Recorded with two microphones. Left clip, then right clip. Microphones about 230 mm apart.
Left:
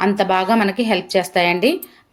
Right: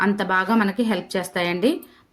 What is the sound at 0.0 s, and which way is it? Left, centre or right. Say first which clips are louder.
Speech: left 4 dB; centre.